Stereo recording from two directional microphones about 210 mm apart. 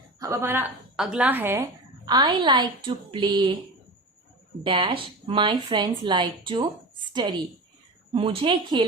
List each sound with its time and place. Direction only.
0.2 s a woman's voice: 10° right (ahead or behind)
4.6 s speech: 25° right (ahead or behind)